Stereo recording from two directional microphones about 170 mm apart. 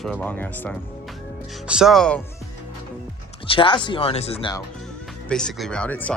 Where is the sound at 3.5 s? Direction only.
30° left (ahead or behind).